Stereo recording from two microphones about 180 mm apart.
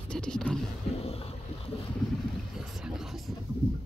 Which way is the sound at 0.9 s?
35° left (ahead or behind).